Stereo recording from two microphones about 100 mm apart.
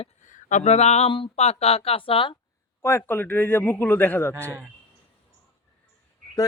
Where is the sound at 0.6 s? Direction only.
90° left.